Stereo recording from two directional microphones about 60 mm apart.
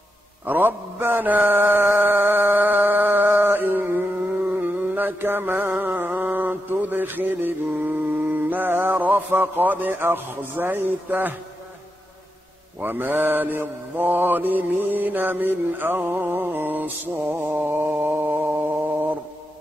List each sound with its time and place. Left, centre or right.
0.5 s mantra: right
12.8 s mantra: right